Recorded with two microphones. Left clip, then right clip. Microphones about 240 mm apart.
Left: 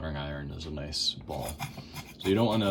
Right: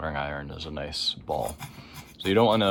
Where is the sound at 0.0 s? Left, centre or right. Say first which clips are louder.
Right 7 dB; centre.